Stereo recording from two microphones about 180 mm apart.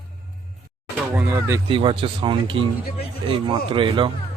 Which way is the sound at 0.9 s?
10° right (ahead or behind).